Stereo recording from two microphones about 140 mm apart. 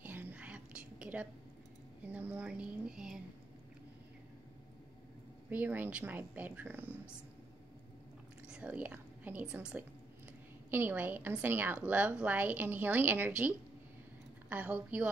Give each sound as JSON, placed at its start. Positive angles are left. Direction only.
{"t": 0.0, "sound": "whispering", "side_deg": -10}
{"t": 2.1, "sound": "a woman's voice", "side_deg": -10}
{"t": 5.5, "sound": "a woman's voice", "side_deg": -10}
{"t": 8.5, "sound": "a woman's voice", "side_deg": -10}